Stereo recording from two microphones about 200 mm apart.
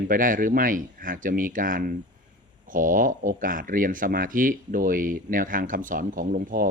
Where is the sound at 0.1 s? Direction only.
45° right (ahead or behind).